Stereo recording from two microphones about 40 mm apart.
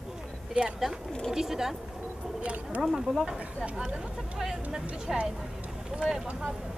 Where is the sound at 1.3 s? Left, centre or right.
Centre.